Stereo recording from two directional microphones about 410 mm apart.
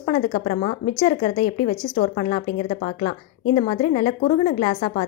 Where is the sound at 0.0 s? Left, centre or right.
Centre.